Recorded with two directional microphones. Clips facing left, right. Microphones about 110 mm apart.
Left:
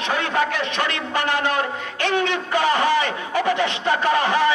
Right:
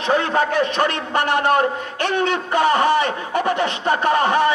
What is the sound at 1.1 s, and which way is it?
A man's voice, 50° right (ahead or behind).